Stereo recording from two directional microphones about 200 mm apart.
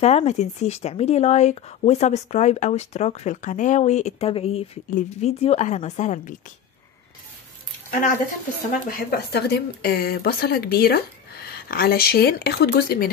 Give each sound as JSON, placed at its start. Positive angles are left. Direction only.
{"t": 0.0, "sound": "speech", "side_deg": 35}
{"t": 8.9, "sound": "speech", "side_deg": 50}